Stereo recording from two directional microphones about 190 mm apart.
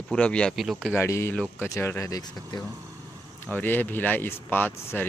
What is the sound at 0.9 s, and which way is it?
Speech, 15° left (ahead or behind).